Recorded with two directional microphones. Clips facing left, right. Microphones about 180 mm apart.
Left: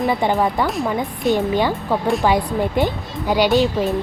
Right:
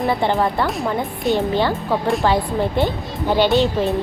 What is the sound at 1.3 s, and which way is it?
Speech, 15° left (ahead or behind).